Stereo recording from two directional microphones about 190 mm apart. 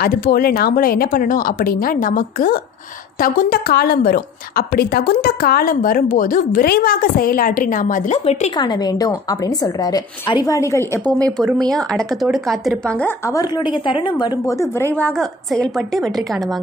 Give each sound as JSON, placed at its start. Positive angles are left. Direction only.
{"t": 0.0, "sound": "a woman's voice", "side_deg": 55}
{"t": 8.5, "sound": "a woman's voice", "side_deg": 20}
{"t": 13.3, "sound": "a woman's voice", "side_deg": 20}